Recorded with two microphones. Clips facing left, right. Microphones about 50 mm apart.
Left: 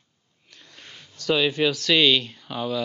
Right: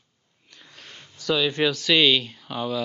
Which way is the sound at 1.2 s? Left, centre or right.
Centre.